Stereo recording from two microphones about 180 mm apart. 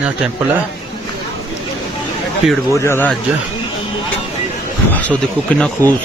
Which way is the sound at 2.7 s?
15° left (ahead or behind).